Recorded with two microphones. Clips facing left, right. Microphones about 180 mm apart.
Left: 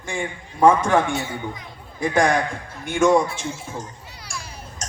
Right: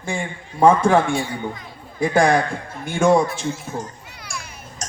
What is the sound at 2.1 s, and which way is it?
A man's voice, 35° right (ahead or behind).